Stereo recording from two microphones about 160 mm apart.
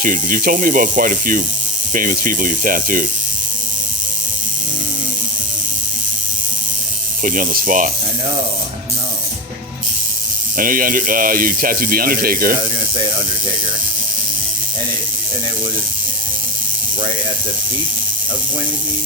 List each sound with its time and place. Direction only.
0.0 s speech: 60° right (ahead or behind)
7.2 s speech: 55° right (ahead or behind)
10.6 s speech: 60° right (ahead or behind)